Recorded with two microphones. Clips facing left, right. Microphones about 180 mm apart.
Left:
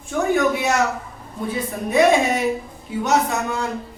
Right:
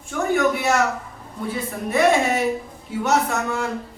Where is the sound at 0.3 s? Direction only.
15° left (ahead or behind).